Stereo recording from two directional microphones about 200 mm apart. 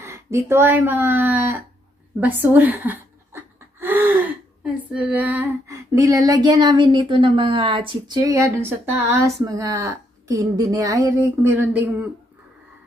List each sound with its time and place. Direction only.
0.0 s speech: 15° right (ahead or behind)
2.1 s a sound: 10° right (ahead or behind)
4.9 s female singing: 5° right (ahead or behind)